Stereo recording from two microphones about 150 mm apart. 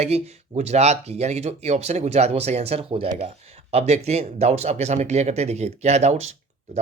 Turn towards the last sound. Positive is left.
turn(degrees=-45)  # may be behind; listen again after turning